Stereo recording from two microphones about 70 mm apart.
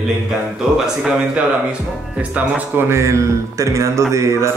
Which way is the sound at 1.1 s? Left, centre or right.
Centre.